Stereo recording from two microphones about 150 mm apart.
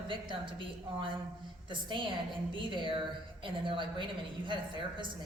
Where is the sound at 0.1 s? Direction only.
35° right (ahead or behind).